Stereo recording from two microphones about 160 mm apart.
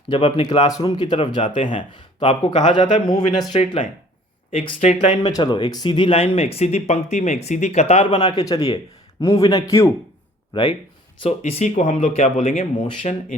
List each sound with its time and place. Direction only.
0.1 s a man's voice: 35° left (ahead or behind)
1.5 s speech: 50° left (ahead or behind)
2.2 s a man's voice: 35° left (ahead or behind)
4.5 s speech: 35° left (ahead or behind)
5.3 s a man's voice: 30° left (ahead or behind)
11.2 s speech: 40° left (ahead or behind)